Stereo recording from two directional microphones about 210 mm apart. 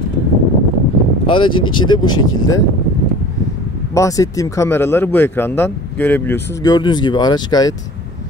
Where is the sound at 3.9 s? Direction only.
15° left (ahead or behind).